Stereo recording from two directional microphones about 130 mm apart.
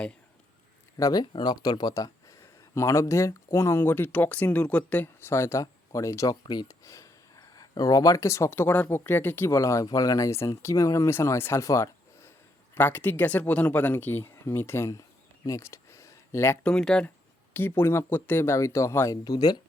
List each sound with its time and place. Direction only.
0.9 s speech: 25° left (ahead or behind)
1.2 s speech: 35° left (ahead or behind); by 15.0 s 20° left (ahead or behind)
15.4 s a sound: 25° left (ahead or behind)
16.6 s speech: 5° left (ahead or behind); by 19.5 s 30° left (ahead or behind)